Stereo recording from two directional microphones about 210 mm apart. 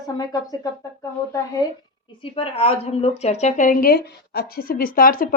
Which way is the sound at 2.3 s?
25° left (ahead or behind).